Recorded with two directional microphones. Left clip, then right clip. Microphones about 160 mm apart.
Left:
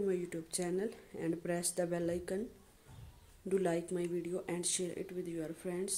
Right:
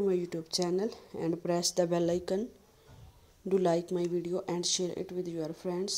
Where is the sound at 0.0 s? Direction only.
25° right (ahead or behind).